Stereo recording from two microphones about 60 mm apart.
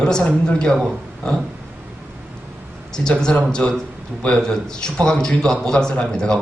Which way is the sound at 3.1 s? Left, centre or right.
Centre.